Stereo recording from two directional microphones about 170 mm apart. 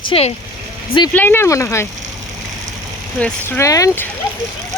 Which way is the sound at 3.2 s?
10° left (ahead or behind).